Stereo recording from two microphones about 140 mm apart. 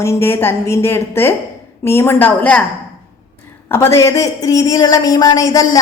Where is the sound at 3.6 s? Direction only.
15° left (ahead or behind).